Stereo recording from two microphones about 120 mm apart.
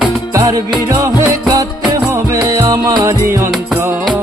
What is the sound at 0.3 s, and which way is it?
Music, 25° right (ahead or behind).